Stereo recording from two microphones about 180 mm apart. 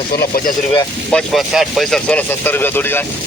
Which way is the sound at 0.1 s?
55° left (ahead or behind).